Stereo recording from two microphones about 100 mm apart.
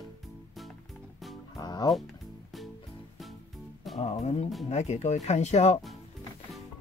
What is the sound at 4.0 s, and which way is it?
Music, 90° left.